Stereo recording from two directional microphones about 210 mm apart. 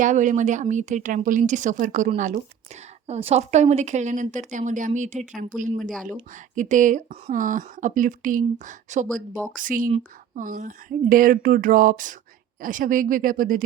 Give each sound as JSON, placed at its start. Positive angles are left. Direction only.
{"t": 0.0, "sound": "speech", "side_deg": -35}
{"t": 5.9, "sound": "speech", "side_deg": 5}
{"t": 6.6, "sound": "speech", "side_deg": -35}